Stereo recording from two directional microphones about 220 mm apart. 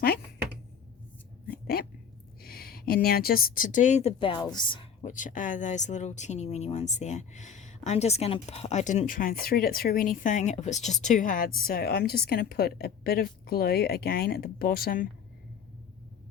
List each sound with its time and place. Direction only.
1.5 s a sound: 45° left (ahead or behind)
2.4 s a woman's voice: 45° left (ahead or behind); by 5.1 s 25° left (ahead or behind)
5.1 s a woman's voice: 35° left (ahead or behind)